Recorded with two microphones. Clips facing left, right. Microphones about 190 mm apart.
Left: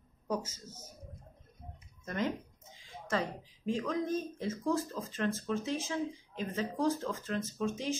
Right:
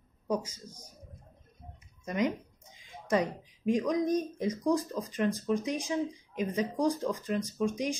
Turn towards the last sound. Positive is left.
turn(degrees=-15)  # may be behind; listen again after turning